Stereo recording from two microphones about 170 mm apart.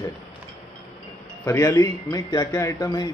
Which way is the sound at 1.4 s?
15° left (ahead or behind).